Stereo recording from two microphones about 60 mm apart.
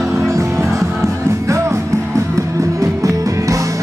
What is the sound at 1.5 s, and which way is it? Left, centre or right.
Music, right.